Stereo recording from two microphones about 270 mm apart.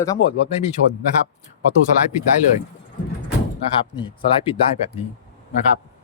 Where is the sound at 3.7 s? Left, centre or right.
Centre.